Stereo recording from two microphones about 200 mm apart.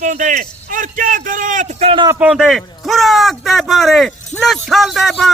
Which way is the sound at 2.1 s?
5° right (ahead or behind).